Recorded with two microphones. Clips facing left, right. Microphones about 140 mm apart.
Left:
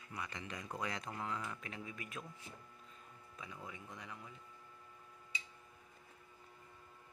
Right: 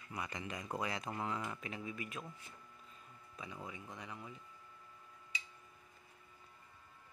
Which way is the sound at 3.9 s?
Centre (ahead or behind).